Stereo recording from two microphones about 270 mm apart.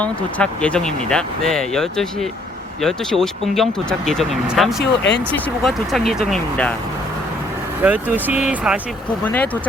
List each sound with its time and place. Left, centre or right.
0.0 s speech: centre
4.8 s speech: left
5.6 s speech: centre
7.8 s speech: centre